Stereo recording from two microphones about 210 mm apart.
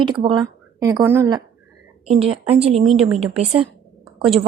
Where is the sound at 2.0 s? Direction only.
30° right (ahead or behind).